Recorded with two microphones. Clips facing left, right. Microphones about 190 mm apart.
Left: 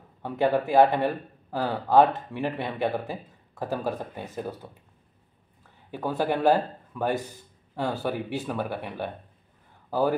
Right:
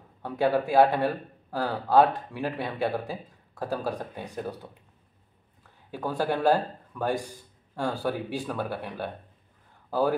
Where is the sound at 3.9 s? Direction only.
5° left (ahead or behind).